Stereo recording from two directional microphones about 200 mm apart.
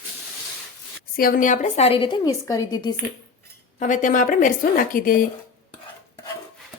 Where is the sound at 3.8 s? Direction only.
40° left (ahead or behind).